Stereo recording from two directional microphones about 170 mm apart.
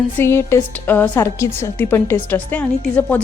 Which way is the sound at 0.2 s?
15° left (ahead or behind).